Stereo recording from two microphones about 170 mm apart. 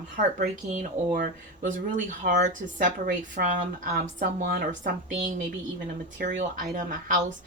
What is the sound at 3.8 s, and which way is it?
A woman's voice, 65° right (ahead or behind).